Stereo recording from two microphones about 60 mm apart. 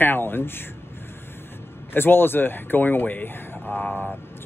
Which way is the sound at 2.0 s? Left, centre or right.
Left.